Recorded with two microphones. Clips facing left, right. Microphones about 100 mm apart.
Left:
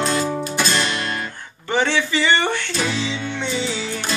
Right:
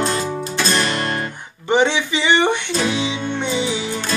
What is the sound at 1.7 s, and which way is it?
Speech, 20° right (ahead or behind).